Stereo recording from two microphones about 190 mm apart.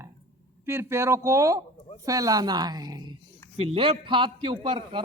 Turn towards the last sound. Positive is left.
turn(degrees=-30)  # may be behind; listen again after turning